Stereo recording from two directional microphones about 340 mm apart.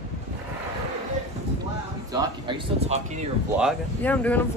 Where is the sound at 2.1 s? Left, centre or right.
Centre.